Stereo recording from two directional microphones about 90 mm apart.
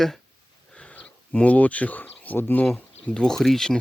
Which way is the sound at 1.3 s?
15° left (ahead or behind).